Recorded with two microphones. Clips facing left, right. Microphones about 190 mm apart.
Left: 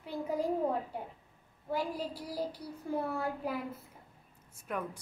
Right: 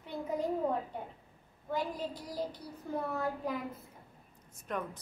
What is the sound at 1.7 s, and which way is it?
A woman's voice, 10° left (ahead or behind).